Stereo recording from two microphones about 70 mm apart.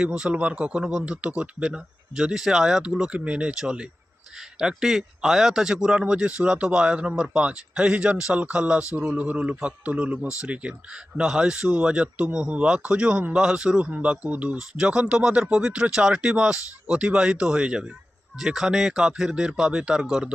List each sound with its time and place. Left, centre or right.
0.2 s a man's voice: centre
3.1 s a man's voice: centre